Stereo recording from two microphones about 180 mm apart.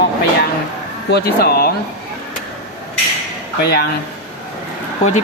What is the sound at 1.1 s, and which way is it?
Speech, 60° left (ahead or behind).